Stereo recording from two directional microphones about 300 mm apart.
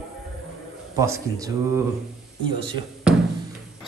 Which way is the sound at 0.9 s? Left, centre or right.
Centre.